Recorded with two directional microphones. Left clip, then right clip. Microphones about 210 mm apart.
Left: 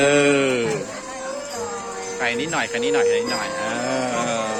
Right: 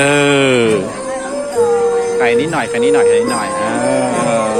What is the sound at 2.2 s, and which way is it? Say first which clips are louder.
Speech: right 9 dB; centre (ahead or behind).